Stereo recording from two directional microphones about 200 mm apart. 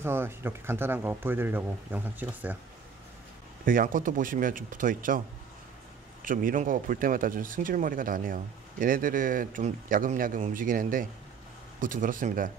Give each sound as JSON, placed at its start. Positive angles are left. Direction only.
{"t": 0.0, "sound": "speech", "side_deg": -10}
{"t": 3.6, "sound": "speech", "side_deg": -45}
{"t": 6.2, "sound": "speech", "side_deg": -45}